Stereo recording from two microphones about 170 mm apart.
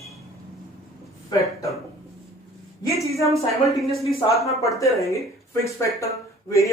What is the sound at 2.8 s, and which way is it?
Speech, 20° left (ahead or behind).